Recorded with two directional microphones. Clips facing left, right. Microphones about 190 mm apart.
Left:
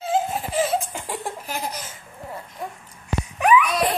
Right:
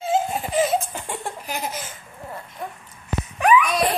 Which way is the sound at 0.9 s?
5° left (ahead or behind).